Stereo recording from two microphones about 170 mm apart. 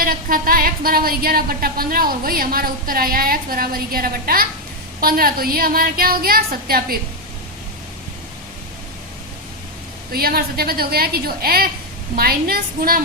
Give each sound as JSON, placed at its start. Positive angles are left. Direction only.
{"t": 0.0, "sound": "speech", "side_deg": -60}
{"t": 10.1, "sound": "speech", "side_deg": -60}